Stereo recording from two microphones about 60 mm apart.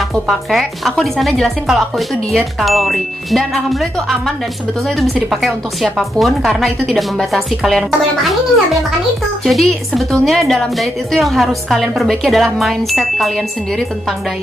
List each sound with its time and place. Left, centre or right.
0.1 s speech: centre
9.4 s speech: centre